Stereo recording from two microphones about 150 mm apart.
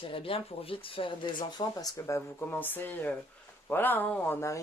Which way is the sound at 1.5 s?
25° left (ahead or behind).